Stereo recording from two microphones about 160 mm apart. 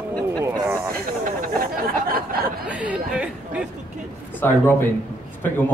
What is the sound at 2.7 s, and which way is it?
Speech, 10° right (ahead or behind).